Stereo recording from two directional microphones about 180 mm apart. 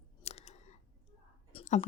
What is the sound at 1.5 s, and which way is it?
Whispering, 35° left (ahead or behind).